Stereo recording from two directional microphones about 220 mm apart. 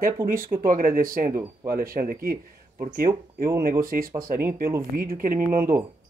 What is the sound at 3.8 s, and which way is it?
A man's voice, 40° right (ahead or behind).